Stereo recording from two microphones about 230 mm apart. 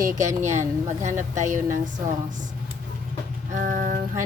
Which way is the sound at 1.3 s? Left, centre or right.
Right.